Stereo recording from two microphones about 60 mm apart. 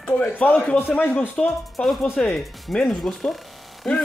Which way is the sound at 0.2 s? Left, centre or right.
Left.